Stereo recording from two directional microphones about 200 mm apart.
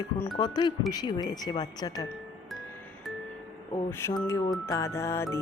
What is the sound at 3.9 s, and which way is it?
Music, 10° left (ahead or behind).